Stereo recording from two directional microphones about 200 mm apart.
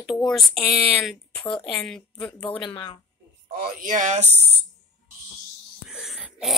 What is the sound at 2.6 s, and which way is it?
Speech, 25° left (ahead or behind).